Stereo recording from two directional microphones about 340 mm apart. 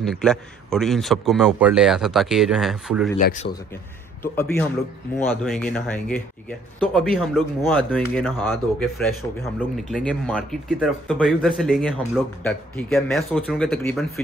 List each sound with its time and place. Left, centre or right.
0.0 s a man's voice: centre
3.4 s a man's voice: left
4.2 s a man's voice: centre